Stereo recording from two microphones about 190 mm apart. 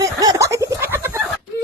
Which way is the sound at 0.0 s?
20° right (ahead or behind).